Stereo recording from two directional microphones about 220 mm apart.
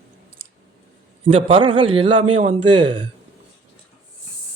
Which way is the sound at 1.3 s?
25° right (ahead or behind).